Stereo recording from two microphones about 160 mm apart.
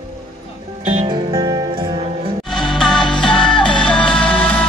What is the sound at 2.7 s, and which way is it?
Music, centre (ahead or behind).